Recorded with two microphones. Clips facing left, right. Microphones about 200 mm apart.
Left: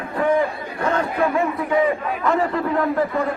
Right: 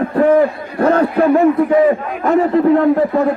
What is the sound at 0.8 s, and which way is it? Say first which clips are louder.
Speech: right 8 dB; 55° right (ahead or behind).